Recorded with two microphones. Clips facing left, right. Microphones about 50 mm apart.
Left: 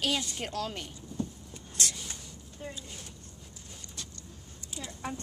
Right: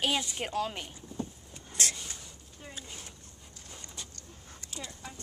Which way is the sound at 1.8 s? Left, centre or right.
Right.